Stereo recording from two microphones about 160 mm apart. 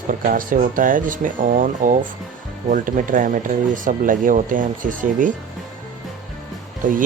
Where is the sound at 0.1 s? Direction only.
60° right (ahead or behind).